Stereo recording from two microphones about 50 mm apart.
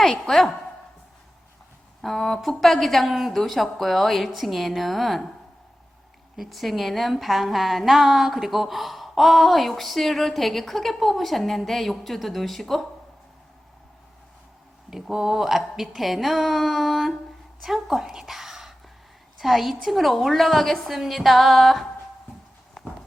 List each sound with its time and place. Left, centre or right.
0.0 s a woman's voice: centre
2.0 s a woman's voice: centre
6.3 s a woman's voice: centre
14.8 s a woman's voice: centre